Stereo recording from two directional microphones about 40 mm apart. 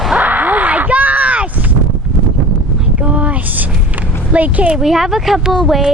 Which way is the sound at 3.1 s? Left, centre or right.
Right.